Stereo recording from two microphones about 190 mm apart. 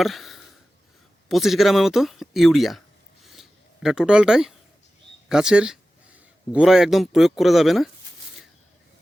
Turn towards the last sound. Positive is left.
turn(degrees=0)  # may be behind; listen again after turning